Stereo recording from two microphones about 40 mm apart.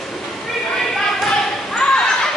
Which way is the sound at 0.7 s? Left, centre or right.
Centre.